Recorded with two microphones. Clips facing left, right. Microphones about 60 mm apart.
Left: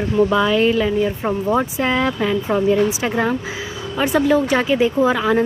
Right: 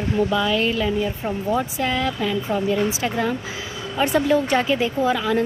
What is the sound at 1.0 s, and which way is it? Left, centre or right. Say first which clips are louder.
Speech: left 4 dB; left.